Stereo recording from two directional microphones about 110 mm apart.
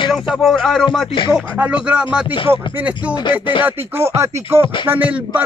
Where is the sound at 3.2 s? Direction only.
45° left (ahead or behind).